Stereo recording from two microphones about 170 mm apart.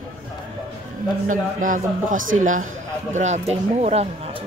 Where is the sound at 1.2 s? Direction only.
50° right (ahead or behind).